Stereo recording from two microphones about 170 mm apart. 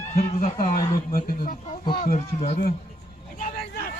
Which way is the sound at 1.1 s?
60° left (ahead or behind).